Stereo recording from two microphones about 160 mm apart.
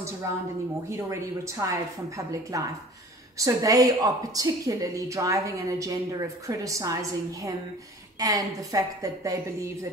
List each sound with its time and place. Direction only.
0.8 s a woman's voice: 20° right (ahead or behind)